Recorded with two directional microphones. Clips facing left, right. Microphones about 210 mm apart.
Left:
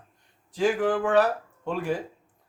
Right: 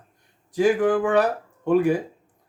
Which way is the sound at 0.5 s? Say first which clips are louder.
Right 5 dB; 15° right (ahead or behind).